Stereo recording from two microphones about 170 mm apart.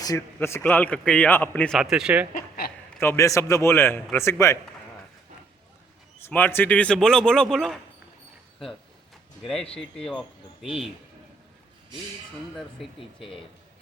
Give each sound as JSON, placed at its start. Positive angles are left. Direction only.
{"t": 0.0, "sound": "a man's voice", "side_deg": 20}
{"t": 1.8, "sound": "a man's voice", "side_deg": -5}
{"t": 2.3, "sound": "a sound", "side_deg": 60}
{"t": 3.0, "sound": "a man's voice", "side_deg": 15}
{"t": 6.2, "sound": "a man's voice", "side_deg": 10}
{"t": 9.7, "sound": "a man's voice", "side_deg": 5}
{"t": 12.5, "sound": "a man's voice", "side_deg": 0}